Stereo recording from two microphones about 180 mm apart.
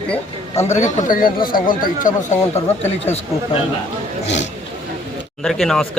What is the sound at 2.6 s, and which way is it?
Speech, 35° left (ahead or behind).